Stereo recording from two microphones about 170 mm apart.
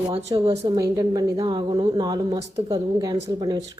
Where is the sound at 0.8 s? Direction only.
20° right (ahead or behind).